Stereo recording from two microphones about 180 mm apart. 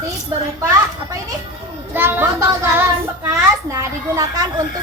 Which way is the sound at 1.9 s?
10° right (ahead or behind).